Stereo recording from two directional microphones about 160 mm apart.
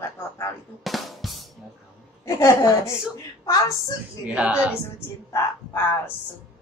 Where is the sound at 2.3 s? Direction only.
20° left (ahead or behind).